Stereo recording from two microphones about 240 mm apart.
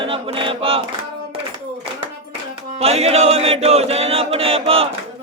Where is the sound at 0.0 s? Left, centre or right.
Right.